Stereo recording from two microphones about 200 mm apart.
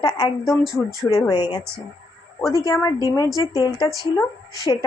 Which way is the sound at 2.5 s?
15° left (ahead or behind).